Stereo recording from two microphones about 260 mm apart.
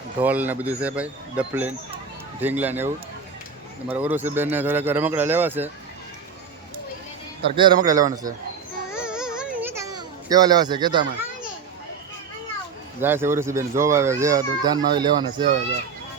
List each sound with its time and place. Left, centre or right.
0.2 s speech: centre
7.4 s speech: centre
8.9 s a sound: centre
13.0 s speech: centre